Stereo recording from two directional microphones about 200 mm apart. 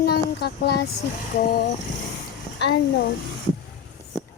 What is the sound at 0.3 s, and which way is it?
Speech, 55° left (ahead or behind).